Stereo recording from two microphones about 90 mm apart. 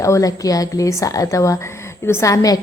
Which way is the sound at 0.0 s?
40° left (ahead or behind).